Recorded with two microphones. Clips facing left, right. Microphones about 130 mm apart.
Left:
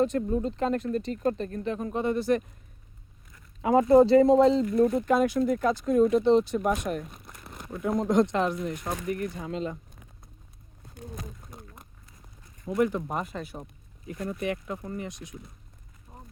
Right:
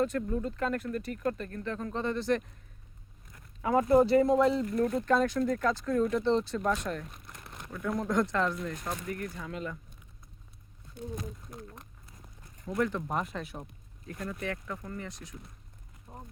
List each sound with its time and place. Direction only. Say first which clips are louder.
0.0 s speech: left 4 dB; 20° left (ahead or behind)
3.6 s speech: left 5 dB; 25° left (ahead or behind)
4.7 s speech: left 4 dB; 15° left (ahead or behind)
11.5 s a sound: right 2 dB; 5° left (ahead or behind)
12.6 s speech: left 5 dB; 15° left (ahead or behind)
14.1 s speech: left 5 dB; 20° left (ahead or behind)
16.1 s a sound: right 2 dB; 15° right (ahead or behind)